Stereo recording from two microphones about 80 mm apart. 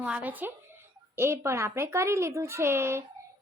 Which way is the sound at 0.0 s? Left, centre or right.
Centre.